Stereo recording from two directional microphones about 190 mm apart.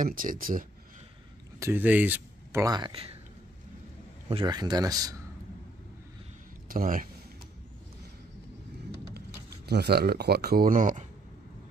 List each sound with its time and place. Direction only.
0.0 s speech: 45° right (ahead or behind)
1.6 s speech: 10° right (ahead or behind); by 3.2 s 30° right (ahead or behind)
4.3 s a man's voice: 25° right (ahead or behind)
6.7 s speech: 45° right (ahead or behind)
9.7 s speech: 60° right (ahead or behind)